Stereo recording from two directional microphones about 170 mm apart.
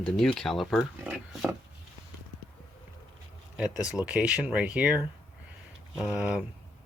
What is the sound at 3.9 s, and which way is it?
Speech, 5° right (ahead or behind).